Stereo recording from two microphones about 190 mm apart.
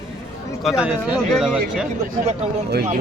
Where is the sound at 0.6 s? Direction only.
5° right (ahead or behind).